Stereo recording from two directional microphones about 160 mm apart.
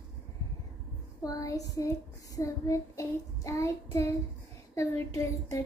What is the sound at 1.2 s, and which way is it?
A child's voice, 20° left (ahead or behind).